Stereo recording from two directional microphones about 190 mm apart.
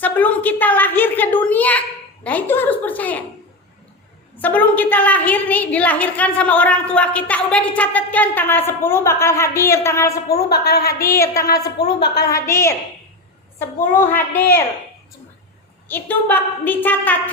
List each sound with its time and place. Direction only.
0.0 s a sound: 10° left (ahead or behind)
2.2 s a woman's voice: 10° left (ahead or behind)
4.4 s a woman's voice: 10° left (ahead or behind)
10.2 s a woman's voice: 55° left (ahead or behind)
11.0 s a woman's voice: 15° left (ahead or behind)
11.8 s a woman's voice: 60° left (ahead or behind)
12.3 s a woman's voice: 15° left (ahead or behind)
13.9 s a woman's voice: 10° left (ahead or behind)
15.9 s a woman's voice: 10° left (ahead or behind)